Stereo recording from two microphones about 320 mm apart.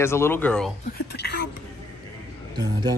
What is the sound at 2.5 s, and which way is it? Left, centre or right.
Speech, centre.